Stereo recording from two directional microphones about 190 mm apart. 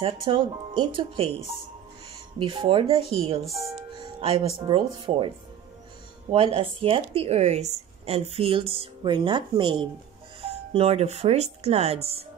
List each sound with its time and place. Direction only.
0.0 s speech: 25° right (ahead or behind)
2.3 s speech: 25° right (ahead or behind)
3.4 s speech: centre (ahead or behind)
3.7 s music: 25° right (ahead or behind)
4.5 s speech: 25° right (ahead or behind)
6.3 s a woman's voice: 30° right (ahead or behind)